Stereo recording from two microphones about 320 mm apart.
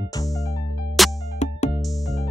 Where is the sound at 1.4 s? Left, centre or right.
Left.